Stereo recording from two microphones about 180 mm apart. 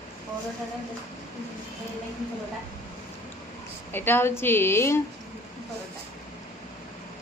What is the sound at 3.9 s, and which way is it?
A woman's voice, 10° left (ahead or behind).